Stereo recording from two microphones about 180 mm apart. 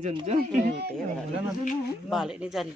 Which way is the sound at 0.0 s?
30° right (ahead or behind).